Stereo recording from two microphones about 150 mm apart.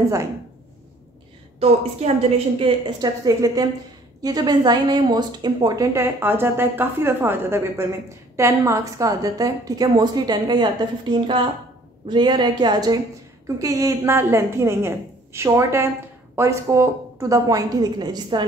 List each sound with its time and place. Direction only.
1.6 s a woman's voice: 45° right (ahead or behind)
3.0 s a woman's voice: 25° right (ahead or behind)